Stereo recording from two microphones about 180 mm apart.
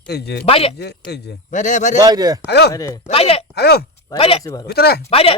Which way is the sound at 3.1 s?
35° left (ahead or behind).